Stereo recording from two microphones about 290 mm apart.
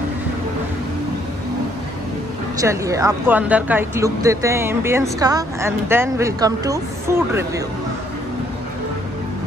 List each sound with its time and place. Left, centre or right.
2.5 s speech: centre